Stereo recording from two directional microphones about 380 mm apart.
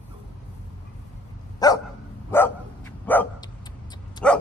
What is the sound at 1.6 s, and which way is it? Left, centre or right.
Dog, centre.